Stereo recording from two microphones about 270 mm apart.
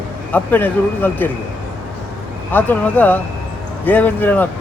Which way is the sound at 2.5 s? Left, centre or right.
Centre.